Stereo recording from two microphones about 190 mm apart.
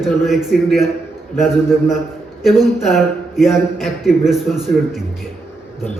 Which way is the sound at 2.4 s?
Centre (ahead or behind).